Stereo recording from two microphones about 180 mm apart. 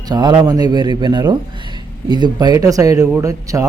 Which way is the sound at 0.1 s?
25° right (ahead or behind).